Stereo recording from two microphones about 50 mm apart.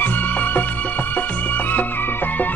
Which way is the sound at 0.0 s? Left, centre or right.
Left.